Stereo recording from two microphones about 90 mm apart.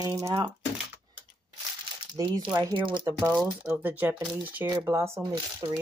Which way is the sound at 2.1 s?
50° right (ahead or behind).